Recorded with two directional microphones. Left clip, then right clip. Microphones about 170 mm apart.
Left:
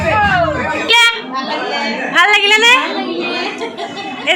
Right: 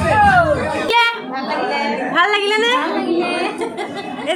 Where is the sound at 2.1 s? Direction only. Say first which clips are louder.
Left 6 dB; 15° right (ahead or behind).